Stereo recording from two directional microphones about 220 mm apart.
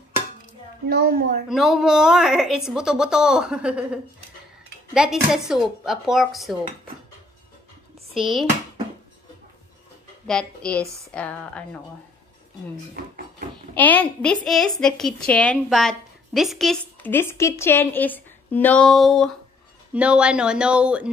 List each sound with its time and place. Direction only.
0.8 s a woman's voice: 45° right (ahead or behind)
1.5 s a woman's voice: centre (ahead or behind)
8.1 s a sound: centre (ahead or behind)
10.2 s a woman's voice: 5° left (ahead or behind)
13.7 s a woman's voice: 10° left (ahead or behind)